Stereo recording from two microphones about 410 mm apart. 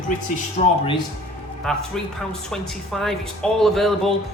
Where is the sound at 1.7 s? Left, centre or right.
Centre.